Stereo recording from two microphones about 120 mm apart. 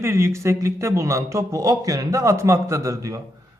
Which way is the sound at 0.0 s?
20° right (ahead or behind).